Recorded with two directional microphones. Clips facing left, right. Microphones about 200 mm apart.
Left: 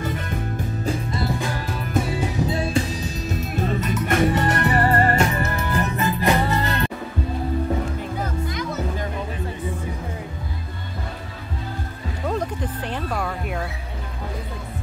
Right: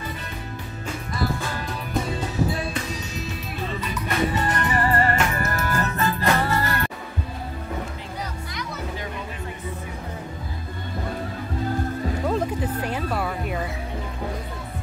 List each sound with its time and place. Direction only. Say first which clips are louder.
2.0 s music: left 3 dB; 10° left (ahead or behind)
2.5 s music: left 5 dB; 25° left (ahead or behind)
3.3 s music: left 6 dB; 45° left (ahead or behind)
4.4 s music: left 3 dB; 65° left (ahead or behind)
4.8 s music: left 2 dB; 40° left (ahead or behind)
5.3 s music: left 1 dB; 15° left (ahead or behind)
12.3 s music: left 1 dB; 5° right (ahead or behind)